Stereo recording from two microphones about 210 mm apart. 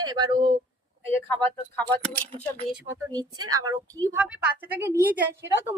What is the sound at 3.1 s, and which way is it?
A woman's voice, 20° right (ahead or behind).